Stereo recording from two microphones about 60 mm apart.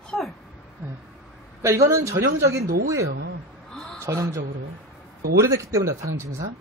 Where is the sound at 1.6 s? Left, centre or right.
Right.